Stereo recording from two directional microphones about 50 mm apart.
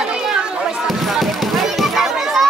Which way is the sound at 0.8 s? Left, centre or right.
Centre.